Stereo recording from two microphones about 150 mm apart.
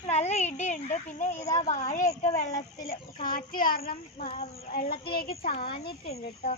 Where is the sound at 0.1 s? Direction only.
45° left (ahead or behind).